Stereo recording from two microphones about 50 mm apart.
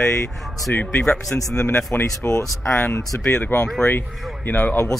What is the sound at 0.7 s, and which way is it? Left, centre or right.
Speech, left.